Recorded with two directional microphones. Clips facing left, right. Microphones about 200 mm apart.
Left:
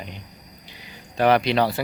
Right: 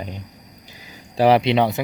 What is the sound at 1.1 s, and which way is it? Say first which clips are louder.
Speech: right 3 dB; 30° right (ahead or behind).